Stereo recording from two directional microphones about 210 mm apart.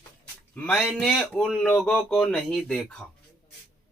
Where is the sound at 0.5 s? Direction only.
5° left (ahead or behind).